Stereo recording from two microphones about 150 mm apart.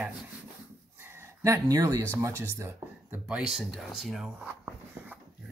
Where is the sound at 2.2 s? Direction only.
20° right (ahead or behind).